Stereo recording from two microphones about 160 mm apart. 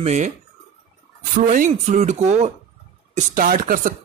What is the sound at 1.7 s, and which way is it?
Speech, 45° right (ahead or behind).